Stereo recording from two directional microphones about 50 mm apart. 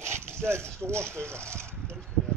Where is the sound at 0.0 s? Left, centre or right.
Right.